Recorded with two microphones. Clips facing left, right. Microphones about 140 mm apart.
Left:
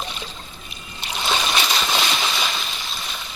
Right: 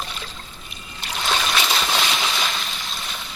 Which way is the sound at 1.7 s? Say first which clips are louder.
Even; centre (ahead or behind).